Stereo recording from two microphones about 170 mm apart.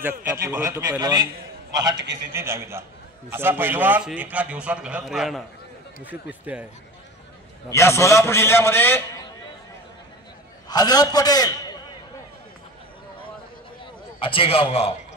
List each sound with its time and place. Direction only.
0.2 s a man's voice: 15° right (ahead or behind)
6.4 s a man's voice: 10° right (ahead or behind)
7.7 s a man's voice: 15° left (ahead or behind)
10.7 s a man's voice: 20° left (ahead or behind)
14.2 s a man's voice: 30° left (ahead or behind)